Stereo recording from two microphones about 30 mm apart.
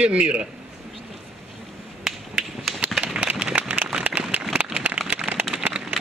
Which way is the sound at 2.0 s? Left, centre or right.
Centre.